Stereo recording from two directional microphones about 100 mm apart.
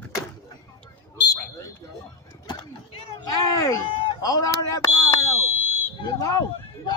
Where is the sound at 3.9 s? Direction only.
70° left (ahead or behind).